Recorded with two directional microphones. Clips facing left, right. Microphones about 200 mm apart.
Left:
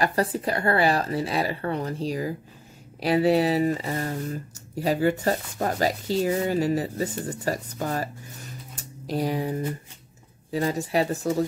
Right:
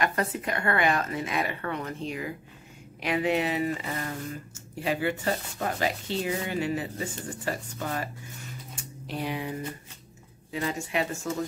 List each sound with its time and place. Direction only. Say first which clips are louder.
0.0 s speech: left 4 dB; 35° left (ahead or behind)